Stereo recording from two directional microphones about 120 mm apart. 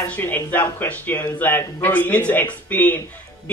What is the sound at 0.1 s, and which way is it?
Speech, 15° left (ahead or behind).